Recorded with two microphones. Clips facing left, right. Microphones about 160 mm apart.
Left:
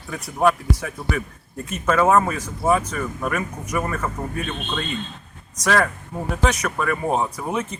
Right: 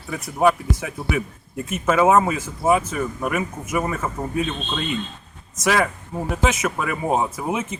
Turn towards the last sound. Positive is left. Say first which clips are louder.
# right 1 dB
turn(degrees=-5)  # may be behind; listen again after turning